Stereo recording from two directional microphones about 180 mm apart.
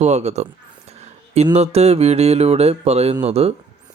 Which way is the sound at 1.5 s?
35° right (ahead or behind).